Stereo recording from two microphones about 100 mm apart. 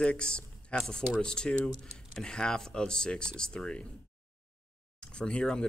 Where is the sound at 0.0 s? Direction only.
10° left (ahead or behind).